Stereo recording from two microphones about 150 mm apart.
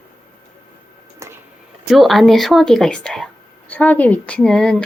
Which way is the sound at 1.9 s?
Centre (ahead or behind).